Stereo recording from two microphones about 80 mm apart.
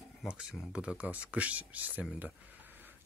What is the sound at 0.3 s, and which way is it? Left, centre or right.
Speech, centre.